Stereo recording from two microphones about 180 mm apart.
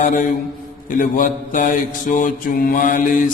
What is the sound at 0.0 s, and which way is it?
Mantra, 45° left (ahead or behind).